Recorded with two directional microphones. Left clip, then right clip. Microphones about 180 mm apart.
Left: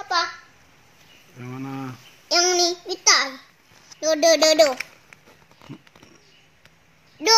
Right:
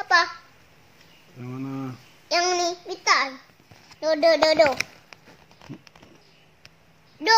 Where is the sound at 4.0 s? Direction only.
65° left (ahead or behind).